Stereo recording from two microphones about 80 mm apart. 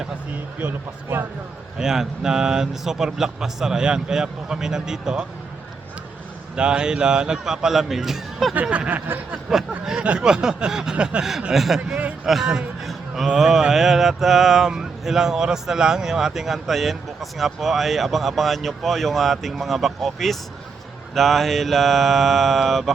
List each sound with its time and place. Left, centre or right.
0.6 s speech: right
1.8 s a man's voice: centre
6.6 s a man's voice: centre
8.9 s speech: right
9.5 s a man's voice: centre